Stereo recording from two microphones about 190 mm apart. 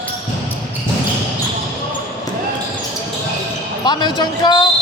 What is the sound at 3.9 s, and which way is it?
Speech, 25° left (ahead or behind).